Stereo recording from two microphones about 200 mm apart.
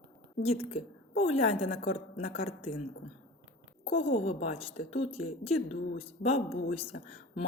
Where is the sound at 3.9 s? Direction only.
30° left (ahead or behind).